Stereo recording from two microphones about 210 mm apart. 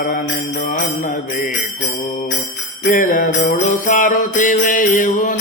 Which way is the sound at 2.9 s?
40° left (ahead or behind).